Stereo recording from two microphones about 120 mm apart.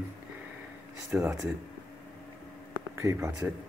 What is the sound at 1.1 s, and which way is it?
Speech, 15° right (ahead or behind).